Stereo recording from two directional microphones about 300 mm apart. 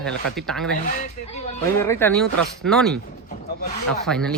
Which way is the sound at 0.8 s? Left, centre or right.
Left.